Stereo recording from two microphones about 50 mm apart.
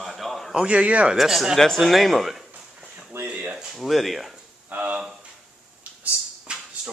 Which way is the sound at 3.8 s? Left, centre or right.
Centre.